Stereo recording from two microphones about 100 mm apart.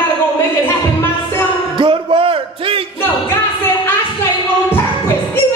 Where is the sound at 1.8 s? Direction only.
60° right (ahead or behind).